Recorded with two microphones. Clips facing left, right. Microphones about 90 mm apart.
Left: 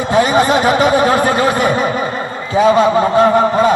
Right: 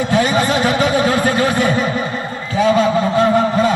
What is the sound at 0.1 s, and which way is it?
A man's voice, 30° left (ahead or behind).